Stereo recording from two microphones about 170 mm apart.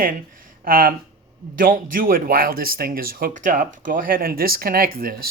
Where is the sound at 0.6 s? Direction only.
55° right (ahead or behind).